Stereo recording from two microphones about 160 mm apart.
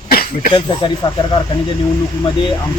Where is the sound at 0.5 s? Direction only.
25° left (ahead or behind).